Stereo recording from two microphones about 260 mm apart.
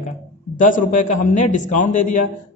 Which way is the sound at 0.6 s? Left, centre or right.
Left.